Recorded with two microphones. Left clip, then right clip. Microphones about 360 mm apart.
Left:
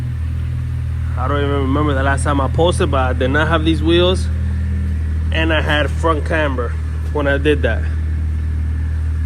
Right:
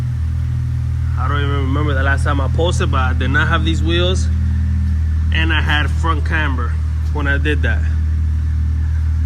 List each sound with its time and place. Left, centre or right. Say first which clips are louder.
1.2 s a sound: left 3 dB; centre
1.5 s mantra: left 4 dB; left
2.0 s speech: left 2 dB; centre
5.3 s speech: left 1 dB; centre